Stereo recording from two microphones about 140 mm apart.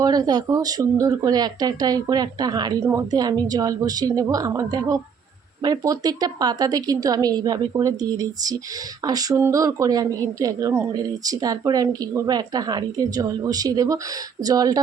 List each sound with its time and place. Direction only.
0.0 s speech: 30° right (ahead or behind)